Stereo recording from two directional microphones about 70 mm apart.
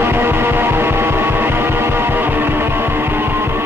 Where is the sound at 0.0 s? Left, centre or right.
Right.